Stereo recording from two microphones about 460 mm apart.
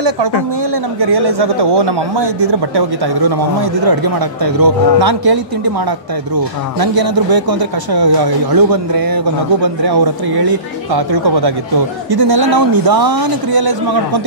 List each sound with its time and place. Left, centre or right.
0.9 s speech: right